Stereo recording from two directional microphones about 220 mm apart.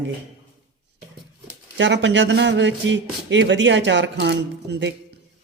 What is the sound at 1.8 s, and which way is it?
Speech, 55° right (ahead or behind).